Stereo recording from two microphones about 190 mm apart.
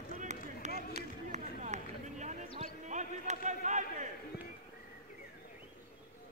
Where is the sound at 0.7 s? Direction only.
55° left (ahead or behind).